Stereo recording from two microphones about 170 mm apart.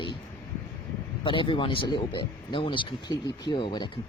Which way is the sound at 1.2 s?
30° left (ahead or behind).